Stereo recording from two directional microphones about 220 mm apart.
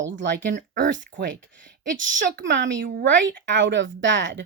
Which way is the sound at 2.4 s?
55° right (ahead or behind).